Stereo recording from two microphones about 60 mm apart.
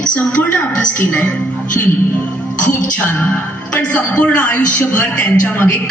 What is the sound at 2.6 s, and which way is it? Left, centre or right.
Speech, left.